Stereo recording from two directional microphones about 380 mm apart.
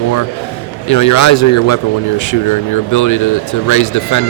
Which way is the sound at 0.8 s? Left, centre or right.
Left.